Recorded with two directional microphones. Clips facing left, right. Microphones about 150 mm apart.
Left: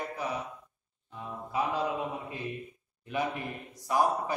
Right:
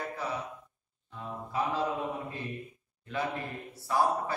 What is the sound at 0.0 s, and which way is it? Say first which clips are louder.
Mantra: left 1 dB; 15° left (ahead or behind).